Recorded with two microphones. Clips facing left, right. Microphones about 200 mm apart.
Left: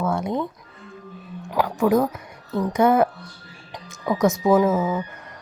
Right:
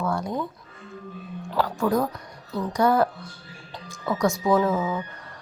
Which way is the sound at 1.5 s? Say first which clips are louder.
Left 4 dB; 15° left (ahead or behind).